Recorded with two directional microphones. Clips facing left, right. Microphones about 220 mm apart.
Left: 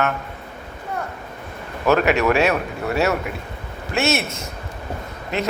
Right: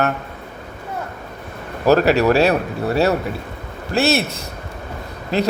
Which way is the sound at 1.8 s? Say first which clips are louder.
Right 3 dB; 35° right (ahead or behind).